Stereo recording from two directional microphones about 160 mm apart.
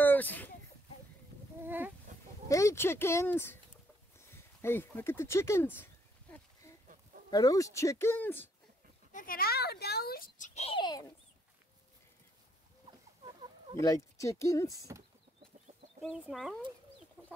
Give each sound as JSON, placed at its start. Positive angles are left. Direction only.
{"t": 0.0, "sound": "a sound", "side_deg": 10}
{"t": 1.6, "sound": "a sound", "side_deg": -10}
{"t": 2.1, "sound": "a sound", "side_deg": -50}
{"t": 2.4, "sound": "speech", "side_deg": 20}
{"t": 7.2, "sound": "speech", "side_deg": 20}
{"t": 9.1, "sound": "a child's voice", "side_deg": 65}
{"t": 10.8, "sound": "speech", "side_deg": 25}
{"t": 13.2, "sound": "chicken", "side_deg": -30}
{"t": 13.8, "sound": "speech", "side_deg": 20}
{"t": 16.0, "sound": "speech", "side_deg": 0}
{"t": 17.2, "sound": "chicken", "side_deg": -15}